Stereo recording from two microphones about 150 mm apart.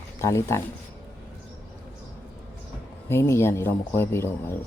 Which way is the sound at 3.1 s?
20° left (ahead or behind).